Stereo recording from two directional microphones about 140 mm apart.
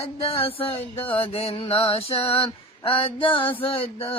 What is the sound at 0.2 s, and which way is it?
Mantra, 45° left (ahead or behind).